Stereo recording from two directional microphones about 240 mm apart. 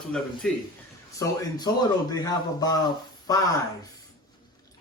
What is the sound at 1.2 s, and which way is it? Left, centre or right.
Speech, centre.